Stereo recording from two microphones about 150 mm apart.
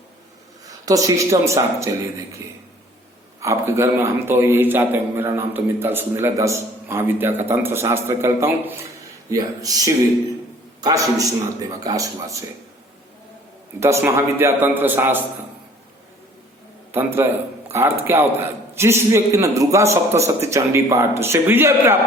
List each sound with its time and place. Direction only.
0.9 s a man's voice: 20° right (ahead or behind)
13.7 s a man's voice: 20° right (ahead or behind)
16.9 s a man's voice: 15° right (ahead or behind)